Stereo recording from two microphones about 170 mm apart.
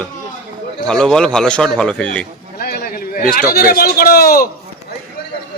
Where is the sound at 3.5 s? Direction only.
60° left (ahead or behind).